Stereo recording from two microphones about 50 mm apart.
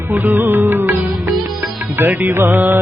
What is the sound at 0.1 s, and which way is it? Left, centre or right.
Music, right.